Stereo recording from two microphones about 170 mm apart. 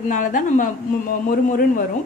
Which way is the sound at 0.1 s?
50° left (ahead or behind).